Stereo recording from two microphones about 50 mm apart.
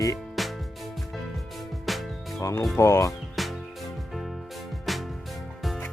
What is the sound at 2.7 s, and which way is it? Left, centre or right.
Speech, left.